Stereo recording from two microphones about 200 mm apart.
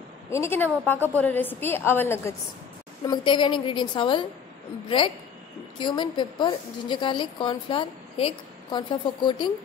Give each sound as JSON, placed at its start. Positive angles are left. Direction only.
{"t": 0.3, "sound": "a woman's voice", "side_deg": 10}
{"t": 3.1, "sound": "a woman's voice", "side_deg": 20}